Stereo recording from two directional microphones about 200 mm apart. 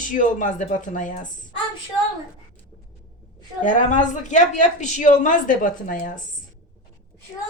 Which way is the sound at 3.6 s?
40° left (ahead or behind).